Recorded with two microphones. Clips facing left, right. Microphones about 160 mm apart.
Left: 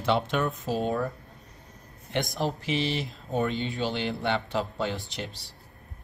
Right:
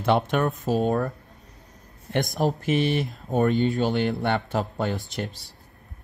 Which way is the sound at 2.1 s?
45° right (ahead or behind).